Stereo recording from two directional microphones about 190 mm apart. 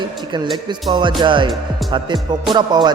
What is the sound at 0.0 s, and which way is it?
Music, 25° right (ahead or behind).